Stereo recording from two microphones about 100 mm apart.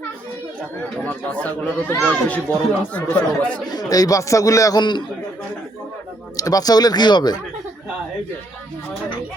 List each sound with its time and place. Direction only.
1.0 s speech: 15° left (ahead or behind)
3.8 s speech: 35° left (ahead or behind)
4.8 s a man's voice: 50° left (ahead or behind)
6.3 s speech: 35° left (ahead or behind)